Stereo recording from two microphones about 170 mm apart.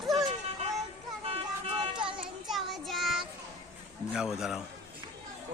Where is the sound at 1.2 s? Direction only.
35° right (ahead or behind).